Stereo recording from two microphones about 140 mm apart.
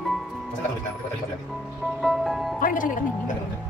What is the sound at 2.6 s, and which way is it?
Music, 70° left (ahead or behind).